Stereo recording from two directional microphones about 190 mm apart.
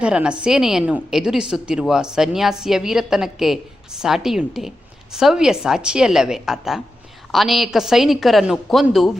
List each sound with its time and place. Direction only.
0.0 s a woman's voice: 5° right (ahead or behind)